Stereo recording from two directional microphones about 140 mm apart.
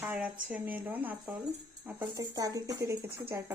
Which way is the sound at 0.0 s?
10° right (ahead or behind).